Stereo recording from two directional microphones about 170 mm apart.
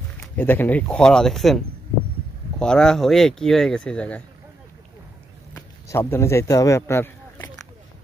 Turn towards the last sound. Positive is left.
turn(degrees=15)  # may be behind; listen again after turning